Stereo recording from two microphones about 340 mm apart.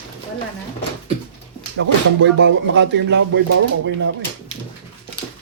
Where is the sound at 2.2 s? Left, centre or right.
Right.